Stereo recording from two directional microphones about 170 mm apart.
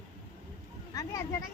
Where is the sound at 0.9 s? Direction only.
20° left (ahead or behind).